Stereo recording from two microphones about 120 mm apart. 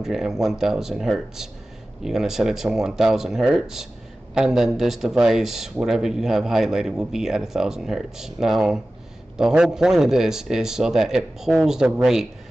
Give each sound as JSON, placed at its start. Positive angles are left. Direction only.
{"t": 0.0, "sound": "speech", "side_deg": -5}